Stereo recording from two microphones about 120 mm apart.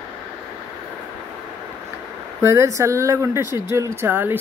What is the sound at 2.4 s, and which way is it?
Speech, 25° right (ahead or behind).